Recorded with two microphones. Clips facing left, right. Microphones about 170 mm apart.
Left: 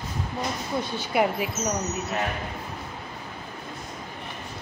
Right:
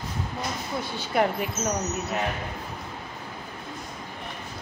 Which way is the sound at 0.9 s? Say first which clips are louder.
Even; 5° left (ahead or behind).